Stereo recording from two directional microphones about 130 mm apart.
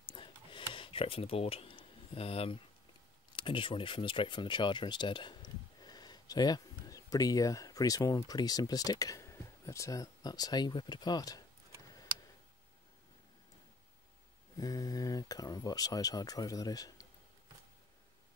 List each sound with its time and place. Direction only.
0.0 s a sound: 40° left (ahead or behind)
3.3 s speech: 40° left (ahead or behind)
14.6 s speech: 30° left (ahead or behind)